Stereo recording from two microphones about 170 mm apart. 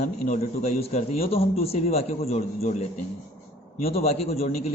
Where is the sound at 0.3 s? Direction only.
40° left (ahead or behind).